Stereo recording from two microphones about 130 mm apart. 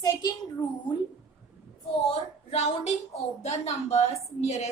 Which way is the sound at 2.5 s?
55° left (ahead or behind).